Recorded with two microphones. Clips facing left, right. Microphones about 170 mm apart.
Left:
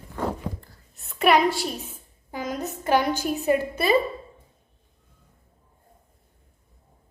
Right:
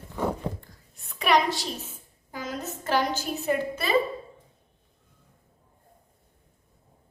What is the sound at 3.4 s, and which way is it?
Speech, 15° left (ahead or behind).